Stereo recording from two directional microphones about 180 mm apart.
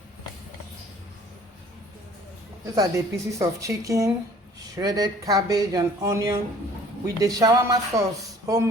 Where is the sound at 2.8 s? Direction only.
15° right (ahead or behind).